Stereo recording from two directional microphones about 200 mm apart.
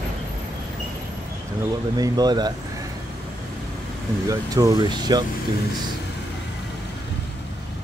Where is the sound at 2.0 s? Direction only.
20° right (ahead or behind).